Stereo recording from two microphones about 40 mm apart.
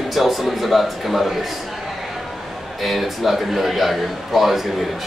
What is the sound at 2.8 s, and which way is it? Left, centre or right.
Speech, centre.